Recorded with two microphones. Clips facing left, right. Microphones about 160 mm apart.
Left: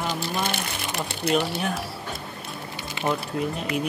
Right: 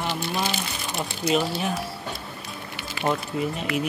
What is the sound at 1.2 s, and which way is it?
Speech, 60° left (ahead or behind).